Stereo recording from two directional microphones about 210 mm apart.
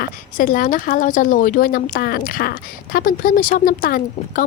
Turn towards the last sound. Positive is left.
turn(degrees=40)  # may be behind; listen again after turning